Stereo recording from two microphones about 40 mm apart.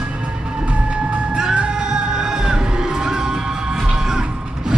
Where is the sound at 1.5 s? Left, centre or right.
Right.